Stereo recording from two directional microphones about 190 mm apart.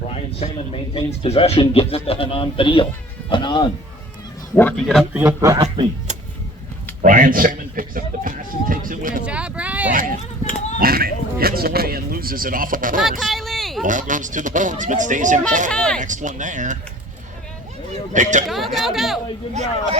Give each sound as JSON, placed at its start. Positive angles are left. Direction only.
{"t": 0.1, "sound": "a man's voice", "side_deg": 30}
{"t": 4.5, "sound": "speech", "side_deg": 5}
{"t": 5.1, "sound": "a man's voice", "side_deg": -15}
{"t": 7.0, "sound": "a man's voice", "side_deg": -45}
{"t": 9.2, "sound": "speech", "side_deg": -5}
{"t": 9.9, "sound": "speech", "side_deg": -45}
{"t": 13.0, "sound": "speech", "side_deg": 0}
{"t": 13.8, "sound": "speech", "side_deg": -40}
{"t": 15.7, "sound": "speech", "side_deg": 5}
{"t": 16.0, "sound": "speech", "side_deg": -40}
{"t": 18.1, "sound": "speech", "side_deg": -40}
{"t": 18.4, "sound": "speech", "side_deg": 0}